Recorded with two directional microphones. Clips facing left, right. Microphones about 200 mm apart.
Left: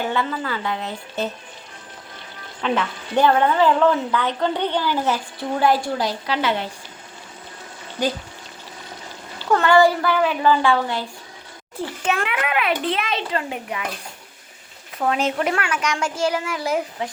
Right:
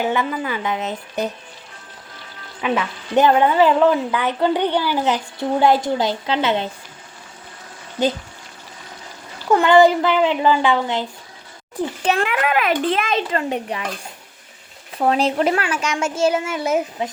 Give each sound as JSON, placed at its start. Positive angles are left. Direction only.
{"t": 0.0, "sound": "a woman's voice", "side_deg": -15}
{"t": 2.6, "sound": "a woman's voice", "side_deg": -5}
{"t": 9.5, "sound": "speech", "side_deg": -15}
{"t": 12.0, "sound": "a child's voice", "side_deg": -35}
{"t": 14.9, "sound": "speech", "side_deg": -30}